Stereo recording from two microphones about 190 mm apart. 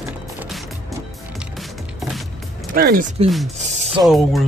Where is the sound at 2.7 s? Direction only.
50° right (ahead or behind).